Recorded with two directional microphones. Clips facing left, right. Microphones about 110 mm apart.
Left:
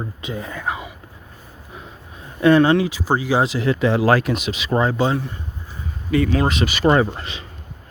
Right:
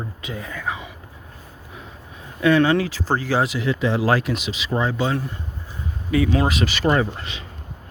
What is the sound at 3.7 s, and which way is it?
Speech, 60° left (ahead or behind).